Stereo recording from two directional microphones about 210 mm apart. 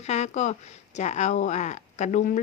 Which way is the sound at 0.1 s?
35° left (ahead or behind).